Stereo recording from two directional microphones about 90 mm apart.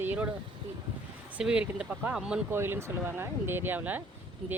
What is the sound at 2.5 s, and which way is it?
Speech, 25° right (ahead or behind).